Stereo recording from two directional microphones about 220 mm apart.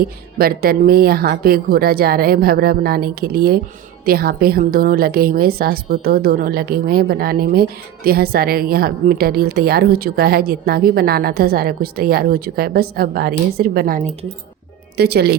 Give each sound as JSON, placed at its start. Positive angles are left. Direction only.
{"t": 0.3, "sound": "a woman's voice", "side_deg": -45}
{"t": 14.9, "sound": "a woman's voice", "side_deg": -45}